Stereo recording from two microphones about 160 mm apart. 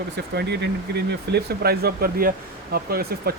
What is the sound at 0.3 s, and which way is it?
Speech, 90° right.